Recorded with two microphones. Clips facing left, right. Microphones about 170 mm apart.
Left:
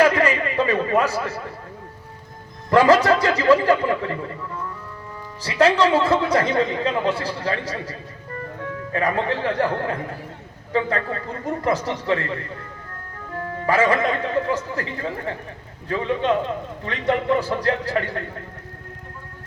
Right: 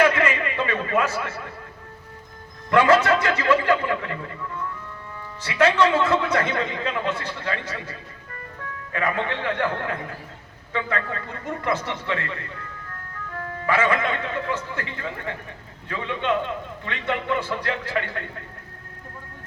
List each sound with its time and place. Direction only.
0.0 s a sound: 35° left (ahead or behind)
2.6 s a man's voice: 35° left (ahead or behind)
5.4 s a man's voice: 35° left (ahead or behind)
13.7 s a man's voice: 35° left (ahead or behind)